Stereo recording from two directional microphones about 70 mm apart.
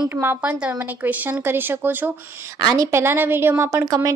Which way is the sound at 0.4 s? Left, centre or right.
Right.